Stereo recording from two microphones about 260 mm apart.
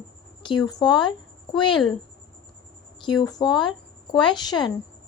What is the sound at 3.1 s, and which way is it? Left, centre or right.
Speech, centre.